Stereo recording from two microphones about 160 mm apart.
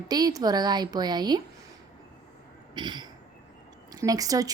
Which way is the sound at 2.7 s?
30° right (ahead or behind).